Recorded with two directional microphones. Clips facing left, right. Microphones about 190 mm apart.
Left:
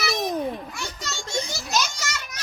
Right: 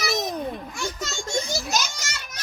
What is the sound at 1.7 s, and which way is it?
Speech, 45° right (ahead or behind).